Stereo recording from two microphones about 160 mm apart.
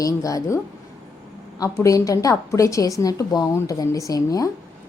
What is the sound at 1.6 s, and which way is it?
A woman's voice, 20° left (ahead or behind).